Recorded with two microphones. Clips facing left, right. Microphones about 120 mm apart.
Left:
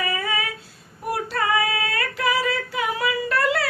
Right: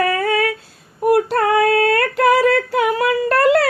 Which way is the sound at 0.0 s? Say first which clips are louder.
Right 9 dB; 55° right (ahead or behind).